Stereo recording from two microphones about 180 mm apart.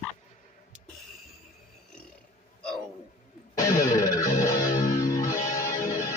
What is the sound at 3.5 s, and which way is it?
Music, 15° left (ahead or behind).